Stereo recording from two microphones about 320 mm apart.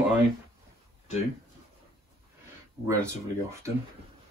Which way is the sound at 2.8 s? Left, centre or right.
Centre.